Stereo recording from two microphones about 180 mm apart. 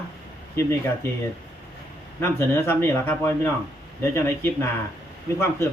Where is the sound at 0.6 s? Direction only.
15° left (ahead or behind).